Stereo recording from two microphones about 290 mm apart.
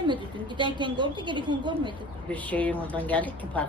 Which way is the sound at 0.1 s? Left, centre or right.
Centre.